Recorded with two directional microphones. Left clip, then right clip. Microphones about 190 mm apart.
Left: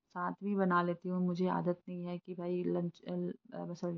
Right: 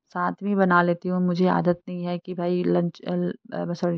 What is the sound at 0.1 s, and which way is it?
Speech, 45° right (ahead or behind).